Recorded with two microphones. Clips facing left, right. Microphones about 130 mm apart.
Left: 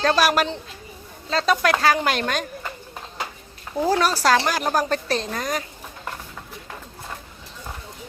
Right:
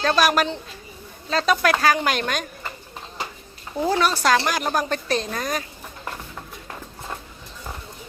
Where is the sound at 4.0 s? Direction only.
35° left (ahead or behind).